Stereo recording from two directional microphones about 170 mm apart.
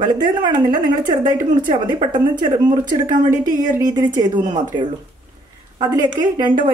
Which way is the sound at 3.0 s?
50° right (ahead or behind).